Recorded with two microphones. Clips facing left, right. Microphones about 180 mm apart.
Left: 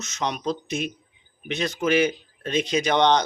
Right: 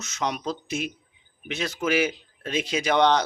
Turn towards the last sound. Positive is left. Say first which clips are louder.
# left 1 dB
turn(degrees=-5)  # may be behind; listen again after turning